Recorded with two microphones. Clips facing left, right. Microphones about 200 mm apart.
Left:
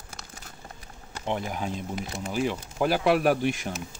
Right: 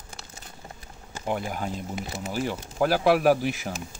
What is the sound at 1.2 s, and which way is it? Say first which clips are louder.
Speech: right 1 dB; 5° right (ahead or behind).